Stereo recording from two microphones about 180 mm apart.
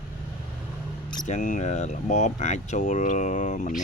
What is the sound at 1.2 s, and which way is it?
Speech, 40° left (ahead or behind).